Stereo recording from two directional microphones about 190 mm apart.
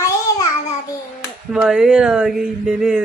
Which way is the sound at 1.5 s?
5° right (ahead or behind).